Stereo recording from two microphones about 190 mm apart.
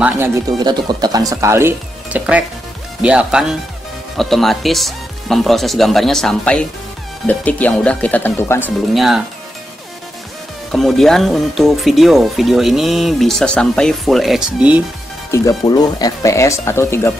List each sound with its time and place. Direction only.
0.0 s speech: 15° right (ahead or behind); by 8.6 s 10° left (ahead or behind)
8.6 s speech: centre (ahead or behind)
10.7 s speech: centre (ahead or behind)
15.3 s speech: 20° left (ahead or behind)